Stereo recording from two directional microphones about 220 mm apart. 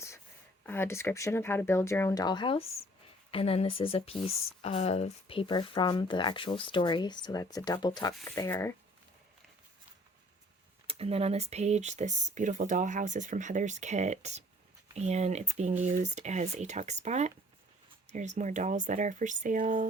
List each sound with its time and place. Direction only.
0.6 s speech: 10° left (ahead or behind)
10.8 s speech: 25° right (ahead or behind)